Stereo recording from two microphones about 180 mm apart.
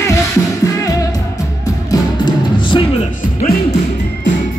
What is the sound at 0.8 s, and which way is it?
Music, 20° left (ahead or behind).